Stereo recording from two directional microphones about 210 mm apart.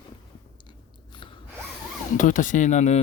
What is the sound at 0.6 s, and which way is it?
Biting, 25° left (ahead or behind).